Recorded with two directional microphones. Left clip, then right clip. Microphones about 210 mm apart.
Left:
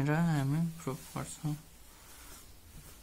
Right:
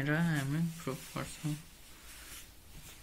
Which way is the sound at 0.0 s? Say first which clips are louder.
Left 1 dB; 50° left (ahead or behind).